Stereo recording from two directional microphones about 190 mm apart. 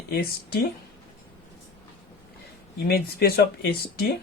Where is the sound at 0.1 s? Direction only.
55° left (ahead or behind).